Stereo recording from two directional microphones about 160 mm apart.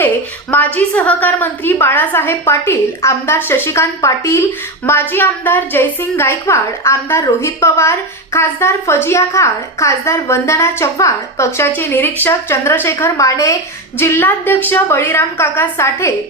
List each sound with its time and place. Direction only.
0.5 s a woman's voice: 10° left (ahead or behind)